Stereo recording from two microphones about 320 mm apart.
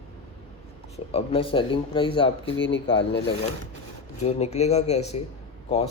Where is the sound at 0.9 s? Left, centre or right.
Centre.